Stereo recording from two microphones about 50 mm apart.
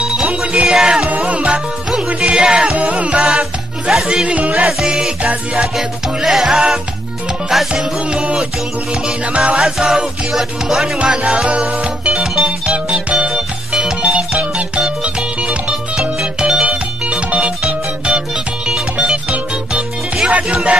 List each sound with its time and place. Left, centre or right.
0.0 s music: centre
2.1 s music: centre
2.7 s music: right
3.9 s music: centre
4.8 s music: centre
5.8 s music: centre; by 9.6 s right
9.6 s music: centre
11.0 s music: right
13.3 s music: centre
14.0 s music: right
16.6 s music: right
20.2 s music: right